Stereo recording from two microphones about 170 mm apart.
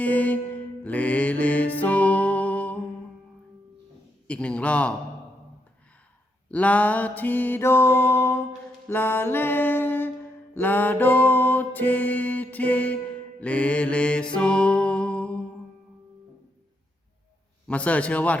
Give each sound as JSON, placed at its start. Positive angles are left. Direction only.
{"t": 0.0, "sound": "mantra", "side_deg": 10}
{"t": 4.3, "sound": "music", "side_deg": 5}
{"t": 6.5, "sound": "music", "side_deg": 10}
{"t": 17.7, "sound": "music", "side_deg": 10}